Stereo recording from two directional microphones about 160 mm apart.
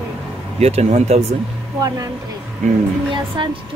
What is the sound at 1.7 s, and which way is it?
Speech, 20° right (ahead or behind).